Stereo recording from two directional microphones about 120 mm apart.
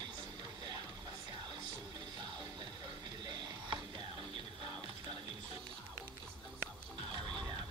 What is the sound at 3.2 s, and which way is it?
Music, 35° right (ahead or behind).